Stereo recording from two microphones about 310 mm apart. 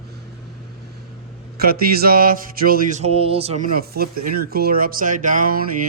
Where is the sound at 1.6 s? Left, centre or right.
Right.